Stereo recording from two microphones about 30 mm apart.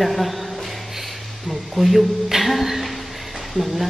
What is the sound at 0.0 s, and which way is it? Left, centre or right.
Speech, centre.